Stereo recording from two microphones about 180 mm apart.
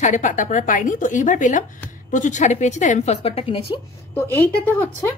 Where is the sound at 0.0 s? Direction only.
45° left (ahead or behind).